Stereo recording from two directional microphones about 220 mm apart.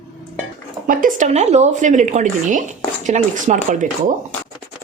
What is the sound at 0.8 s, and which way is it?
Speech, 35° right (ahead or behind).